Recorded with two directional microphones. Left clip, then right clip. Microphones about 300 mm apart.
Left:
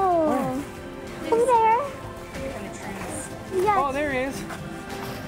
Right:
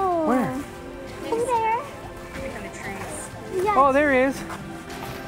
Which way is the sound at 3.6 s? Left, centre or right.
Centre.